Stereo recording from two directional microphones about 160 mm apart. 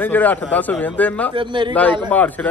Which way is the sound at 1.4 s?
30° right (ahead or behind).